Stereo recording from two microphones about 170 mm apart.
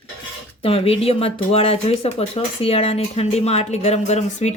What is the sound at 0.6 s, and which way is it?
Speech, 35° left (ahead or behind).